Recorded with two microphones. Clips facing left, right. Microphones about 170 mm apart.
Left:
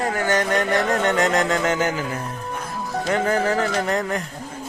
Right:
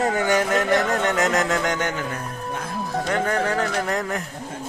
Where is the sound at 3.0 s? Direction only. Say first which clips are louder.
Left 3 dB; 5° left (ahead or behind).